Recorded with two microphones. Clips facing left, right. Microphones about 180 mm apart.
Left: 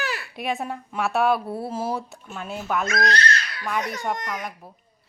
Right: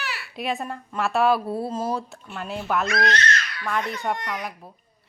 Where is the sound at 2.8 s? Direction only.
40° left (ahead or behind).